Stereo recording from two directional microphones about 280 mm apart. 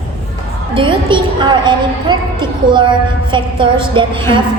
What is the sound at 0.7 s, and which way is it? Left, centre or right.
A woman's voice, centre.